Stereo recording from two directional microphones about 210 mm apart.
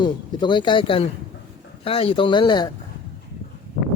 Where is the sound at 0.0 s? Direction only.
20° left (ahead or behind).